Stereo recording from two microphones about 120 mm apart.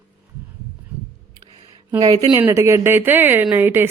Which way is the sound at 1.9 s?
30° right (ahead or behind).